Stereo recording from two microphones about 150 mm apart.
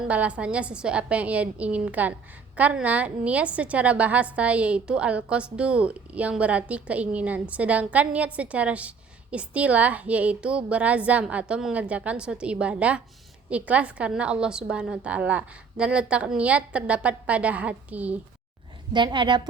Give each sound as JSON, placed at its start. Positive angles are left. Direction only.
{"t": 0.1, "sound": "a woman's voice", "side_deg": -10}
{"t": 18.9, "sound": "a woman's voice", "side_deg": -30}